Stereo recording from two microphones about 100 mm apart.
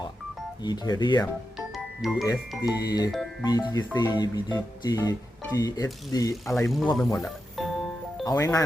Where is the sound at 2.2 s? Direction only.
40° left (ahead or behind).